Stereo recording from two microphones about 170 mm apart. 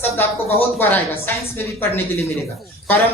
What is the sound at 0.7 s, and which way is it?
Speech, 10° left (ahead or behind).